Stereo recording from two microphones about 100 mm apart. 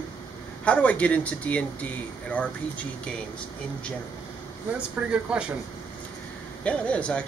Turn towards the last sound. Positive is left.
turn(degrees=10)  # may be behind; listen again after turning